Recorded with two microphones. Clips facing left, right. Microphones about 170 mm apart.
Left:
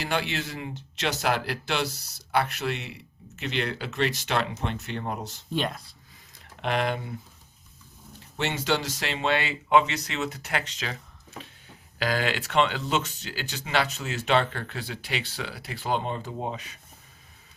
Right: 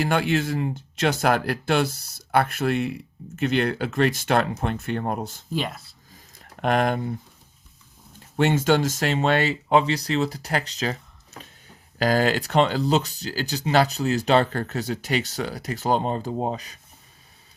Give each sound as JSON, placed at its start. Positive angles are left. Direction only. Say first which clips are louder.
{"t": 0.0, "sound": "speech", "louder": "right 7 dB", "side_deg": -50}
{"t": 5.5, "sound": "speech", "louder": "even", "side_deg": -5}
{"t": 6.4, "sound": "speech", "louder": "right 5 dB", "side_deg": -45}
{"t": 8.4, "sound": "speech", "louder": "right 8 dB", "side_deg": -50}